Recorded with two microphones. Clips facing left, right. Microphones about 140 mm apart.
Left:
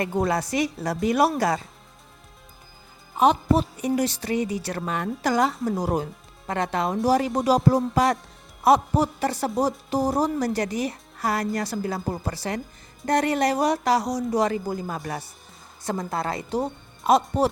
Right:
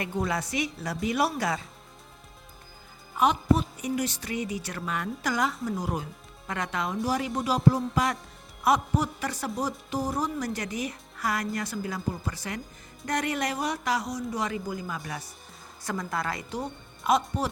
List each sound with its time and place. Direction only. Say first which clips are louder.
0.0 s speech: left 6 dB; 40° left (ahead or behind)
3.2 s speech: left 4 dB; 30° left (ahead or behind)